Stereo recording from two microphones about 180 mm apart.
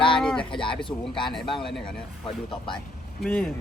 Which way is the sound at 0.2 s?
5° left (ahead or behind).